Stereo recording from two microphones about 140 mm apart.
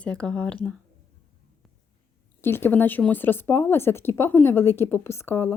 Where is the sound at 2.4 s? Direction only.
15° left (ahead or behind).